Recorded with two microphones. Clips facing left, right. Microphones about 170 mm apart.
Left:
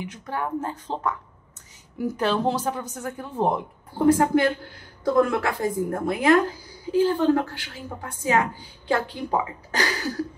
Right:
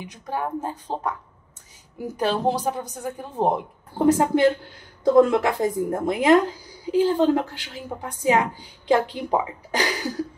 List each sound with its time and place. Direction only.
0.1 s a woman's voice: 15° right (ahead or behind)